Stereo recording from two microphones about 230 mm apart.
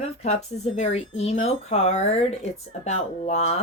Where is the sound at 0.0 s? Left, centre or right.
Left.